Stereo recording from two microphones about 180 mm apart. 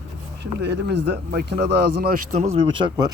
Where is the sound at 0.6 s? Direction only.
70° right (ahead or behind); by 2.6 s 40° right (ahead or behind).